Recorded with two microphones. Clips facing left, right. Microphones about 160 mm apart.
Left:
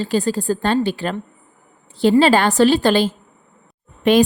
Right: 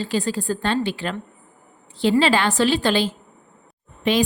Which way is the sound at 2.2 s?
45° left (ahead or behind).